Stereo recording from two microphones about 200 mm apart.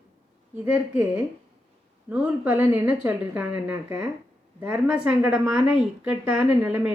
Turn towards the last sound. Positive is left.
turn(degrees=-5)  # may be behind; listen again after turning